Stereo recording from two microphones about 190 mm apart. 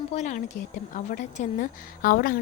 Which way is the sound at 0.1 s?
40° left (ahead or behind).